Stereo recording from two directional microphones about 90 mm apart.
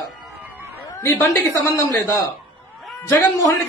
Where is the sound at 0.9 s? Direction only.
35° left (ahead or behind).